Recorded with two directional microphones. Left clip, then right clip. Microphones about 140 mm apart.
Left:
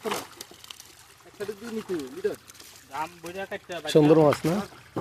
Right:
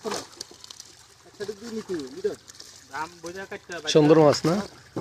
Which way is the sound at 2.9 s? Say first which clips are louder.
Even; 45° left (ahead or behind).